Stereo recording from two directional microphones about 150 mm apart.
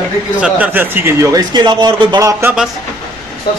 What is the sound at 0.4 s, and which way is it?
Speech, 10° right (ahead or behind).